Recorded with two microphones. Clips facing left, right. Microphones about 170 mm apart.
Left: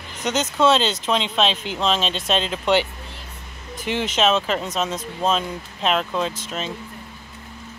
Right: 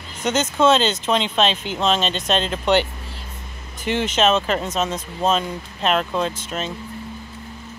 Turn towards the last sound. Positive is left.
turn(degrees=0)  # may be behind; listen again after turning